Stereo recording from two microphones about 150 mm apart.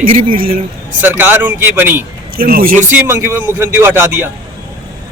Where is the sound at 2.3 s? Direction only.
75° right (ahead or behind).